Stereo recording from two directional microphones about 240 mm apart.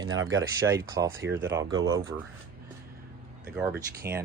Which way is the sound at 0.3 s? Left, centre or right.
Centre.